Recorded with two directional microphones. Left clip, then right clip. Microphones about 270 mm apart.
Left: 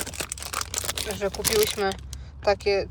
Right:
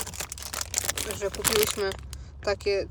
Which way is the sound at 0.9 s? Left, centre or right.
Centre.